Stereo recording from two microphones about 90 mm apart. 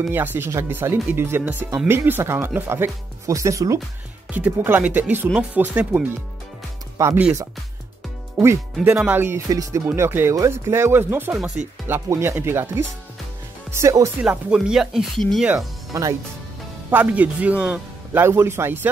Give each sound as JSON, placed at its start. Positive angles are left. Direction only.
{"t": 0.1, "sound": "speech", "side_deg": -25}
{"t": 4.3, "sound": "speech", "side_deg": -20}
{"t": 7.0, "sound": "speech", "side_deg": -35}
{"t": 8.9, "sound": "speech", "side_deg": -20}
{"t": 9.5, "sound": "speech", "side_deg": -35}
{"t": 9.8, "sound": "speech", "side_deg": -25}
{"t": 11.6, "sound": "speech", "side_deg": -15}
{"t": 11.9, "sound": "speech", "side_deg": -30}
{"t": 14.2, "sound": "speech", "side_deg": -10}
{"t": 15.1, "sound": "speech", "side_deg": 5}
{"t": 15.9, "sound": "speech", "side_deg": -40}
{"t": 16.9, "sound": "speech", "side_deg": -15}
{"t": 18.2, "sound": "speech", "side_deg": -30}